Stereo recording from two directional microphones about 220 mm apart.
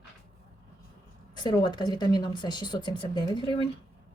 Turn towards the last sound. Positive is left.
turn(degrees=20)  # may be behind; listen again after turning